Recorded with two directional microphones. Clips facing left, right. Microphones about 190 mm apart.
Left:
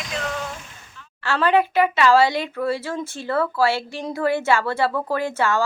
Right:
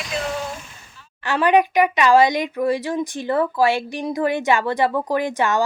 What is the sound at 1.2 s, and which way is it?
Speech, 15° right (ahead or behind).